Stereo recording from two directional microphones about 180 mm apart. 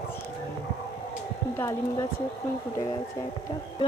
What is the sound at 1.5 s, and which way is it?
Speech, 15° left (ahead or behind).